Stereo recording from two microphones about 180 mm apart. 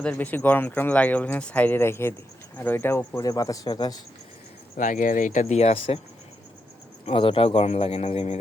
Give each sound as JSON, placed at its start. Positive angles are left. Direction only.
{"t": 0.0, "sound": "speech", "side_deg": 10}
{"t": 4.8, "sound": "speech", "side_deg": 45}
{"t": 7.0, "sound": "speech", "side_deg": 30}